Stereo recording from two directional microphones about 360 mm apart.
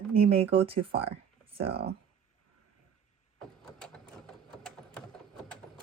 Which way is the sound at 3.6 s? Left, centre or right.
Centre.